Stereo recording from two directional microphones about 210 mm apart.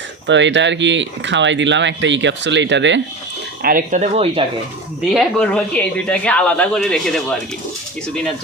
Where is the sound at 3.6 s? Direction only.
45° right (ahead or behind).